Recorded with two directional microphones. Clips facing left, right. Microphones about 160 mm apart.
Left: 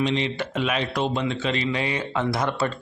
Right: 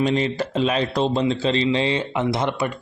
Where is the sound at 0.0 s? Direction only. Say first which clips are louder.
Right 3 dB; 45° right (ahead or behind).